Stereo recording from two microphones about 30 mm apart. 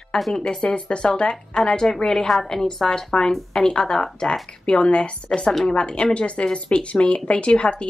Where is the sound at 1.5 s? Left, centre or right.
Left.